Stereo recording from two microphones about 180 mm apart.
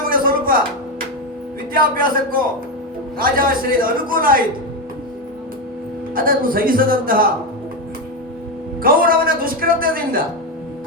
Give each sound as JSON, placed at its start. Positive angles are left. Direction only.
{"t": 0.1, "sound": "music", "side_deg": -50}
{"t": 1.7, "sound": "a man's voice", "side_deg": -50}
{"t": 6.1, "sound": "a man's voice", "side_deg": -50}
{"t": 8.8, "sound": "a man's voice", "side_deg": -50}